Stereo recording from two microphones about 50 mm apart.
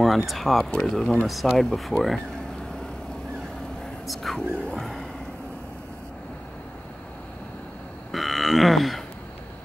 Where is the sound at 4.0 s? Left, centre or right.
Centre.